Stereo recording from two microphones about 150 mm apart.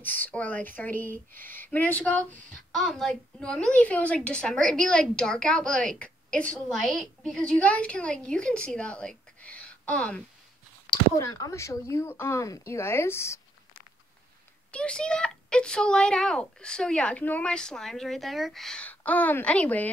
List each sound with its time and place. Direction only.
0.0 s a woman's voice: 10° left (ahead or behind)
1.1 s speech: 65° right (ahead or behind)
1.7 s a woman's voice: 10° left (ahead or behind)
11.1 s speech: 25° left (ahead or behind)
14.7 s a child's voice: 5° left (ahead or behind)